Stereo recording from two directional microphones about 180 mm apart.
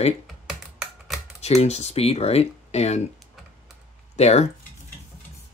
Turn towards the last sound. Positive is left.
turn(degrees=35)  # may be behind; listen again after turning